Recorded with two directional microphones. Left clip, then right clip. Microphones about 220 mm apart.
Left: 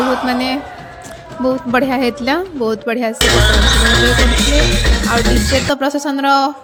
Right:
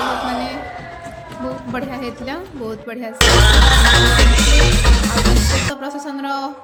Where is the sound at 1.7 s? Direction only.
40° left (ahead or behind).